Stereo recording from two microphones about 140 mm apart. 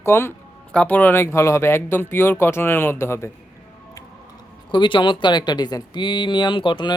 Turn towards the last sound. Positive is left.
turn(degrees=35)  # may be behind; listen again after turning